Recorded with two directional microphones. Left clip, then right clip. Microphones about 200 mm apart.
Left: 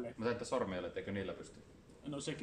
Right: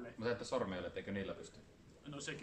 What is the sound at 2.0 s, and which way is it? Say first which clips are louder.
Speech: left 4 dB; 20° left (ahead or behind).